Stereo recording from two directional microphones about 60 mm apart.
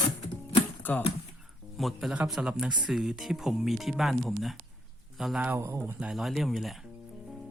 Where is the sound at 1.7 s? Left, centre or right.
Centre.